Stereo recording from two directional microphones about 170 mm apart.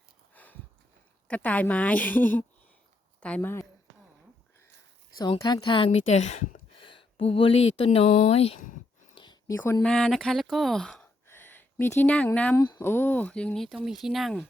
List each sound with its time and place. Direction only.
0.3 s sniff: 10° left (ahead or behind)
1.3 s a woman's voice: 10° left (ahead or behind)
5.1 s a woman's voice: 20° left (ahead or behind); by 6.6 s 45° left (ahead or behind)
6.7 s speech: 30° left (ahead or behind)
9.1 s a sound: 25° left (ahead or behind)
9.6 s a woman's voice: 15° left (ahead or behind)
9.9 s speech: 5° left (ahead or behind)
11.3 s a sound: 15° left (ahead or behind)
12.5 s speech: 20° left (ahead or behind); by 14.4 s centre (ahead or behind)